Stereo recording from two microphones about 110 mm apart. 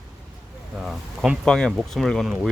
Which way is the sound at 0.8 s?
Centre (ahead or behind).